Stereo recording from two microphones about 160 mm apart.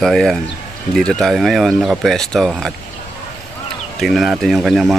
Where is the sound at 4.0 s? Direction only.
Centre (ahead or behind).